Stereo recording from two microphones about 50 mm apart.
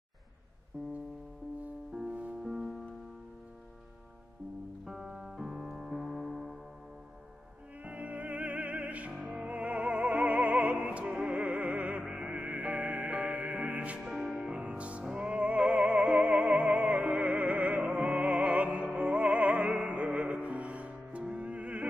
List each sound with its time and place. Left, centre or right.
2.0 s music: right
2.4 s music: centre
4.8 s piano: centre
7.8 s music: right
14.0 s music: centre
14.4 s music: centre